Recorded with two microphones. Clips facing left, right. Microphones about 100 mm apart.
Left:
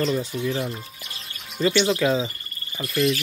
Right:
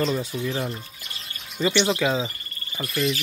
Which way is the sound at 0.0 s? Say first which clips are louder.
Left 1 dB; 5° right (ahead or behind).